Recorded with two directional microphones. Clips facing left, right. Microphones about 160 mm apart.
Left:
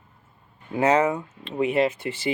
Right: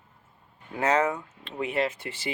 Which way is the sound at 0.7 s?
15° left (ahead or behind).